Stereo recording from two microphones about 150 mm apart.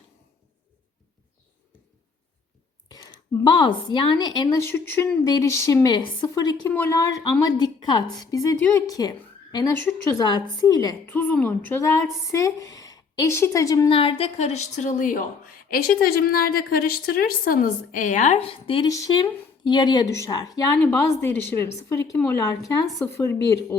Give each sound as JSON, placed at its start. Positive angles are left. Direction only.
{"t": 2.9, "sound": "a woman's voice", "side_deg": 30}
{"t": 6.7, "sound": "a woman's voice", "side_deg": 15}
{"t": 11.1, "sound": "a woman's voice", "side_deg": 10}
{"t": 13.9, "sound": "a woman's voice", "side_deg": 35}
{"t": 15.7, "sound": "a woman's voice", "side_deg": 80}
{"t": 18.9, "sound": "a woman's voice", "side_deg": 25}
{"t": 20.8, "sound": "a woman's voice", "side_deg": 15}